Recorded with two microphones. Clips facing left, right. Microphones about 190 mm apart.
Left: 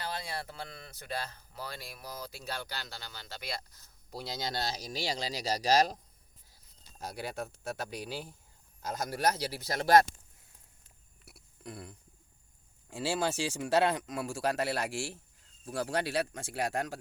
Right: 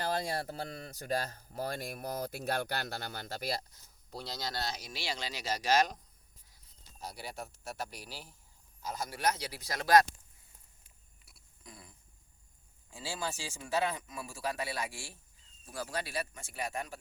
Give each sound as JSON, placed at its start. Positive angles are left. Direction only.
{"t": 0.0, "sound": "speech", "side_deg": -45}
{"t": 4.1, "sound": "speech", "side_deg": 10}
{"t": 4.4, "sound": "speech", "side_deg": 25}
{"t": 9.0, "sound": "speech", "side_deg": 40}
{"t": 11.3, "sound": "a sound", "side_deg": 65}
{"t": 12.9, "sound": "speech", "side_deg": 70}